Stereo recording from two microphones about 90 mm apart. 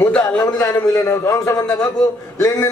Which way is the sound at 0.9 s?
35° left (ahead or behind).